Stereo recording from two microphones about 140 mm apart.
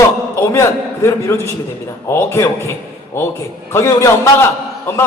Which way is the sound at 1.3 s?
20° left (ahead or behind).